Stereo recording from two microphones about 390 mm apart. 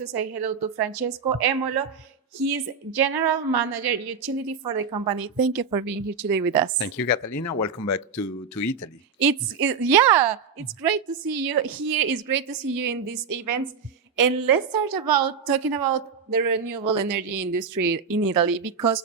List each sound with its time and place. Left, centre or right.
0.0 s a woman's voice: right
6.9 s speech: left
9.1 s a woman's voice: right